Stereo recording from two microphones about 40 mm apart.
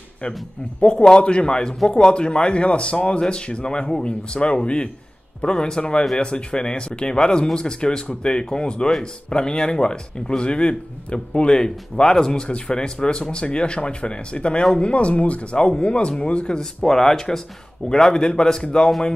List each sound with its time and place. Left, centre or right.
0.7 s speech: left
16.8 s speech: centre